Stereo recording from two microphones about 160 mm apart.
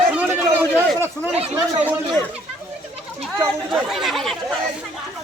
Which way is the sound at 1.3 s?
40° right (ahead or behind).